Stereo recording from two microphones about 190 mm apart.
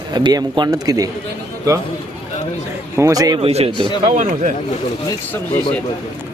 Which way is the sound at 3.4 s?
30° right (ahead or behind).